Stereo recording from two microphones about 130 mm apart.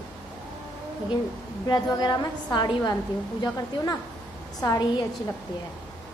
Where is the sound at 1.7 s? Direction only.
30° left (ahead or behind).